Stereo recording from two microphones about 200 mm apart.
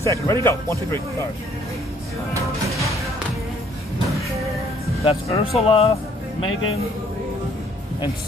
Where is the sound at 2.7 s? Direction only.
Centre (ahead or behind).